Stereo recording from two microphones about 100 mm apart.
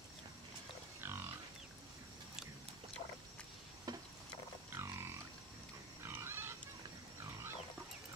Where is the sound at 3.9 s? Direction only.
40° right (ahead or behind).